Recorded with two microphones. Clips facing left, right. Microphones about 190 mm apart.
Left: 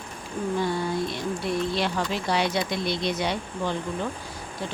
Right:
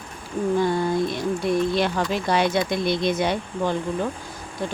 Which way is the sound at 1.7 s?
50° right (ahead or behind).